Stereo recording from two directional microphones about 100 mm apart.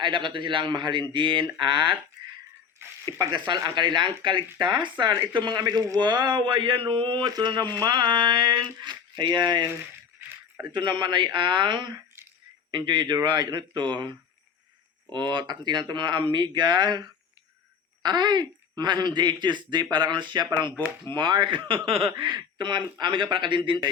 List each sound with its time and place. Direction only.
0.0 s speech: 50° right (ahead or behind)
3.1 s speech: 45° right (ahead or behind)
10.2 s a sound: 20° right (ahead or behind)
10.7 s speech: 50° right (ahead or behind); by 22.1 s 70° right (ahead or behind)
22.2 s speech: 50° right (ahead or behind)